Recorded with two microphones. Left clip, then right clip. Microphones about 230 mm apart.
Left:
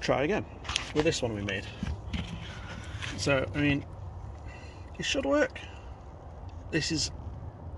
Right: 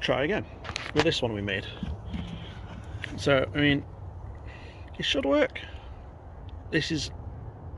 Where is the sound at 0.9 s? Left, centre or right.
Centre.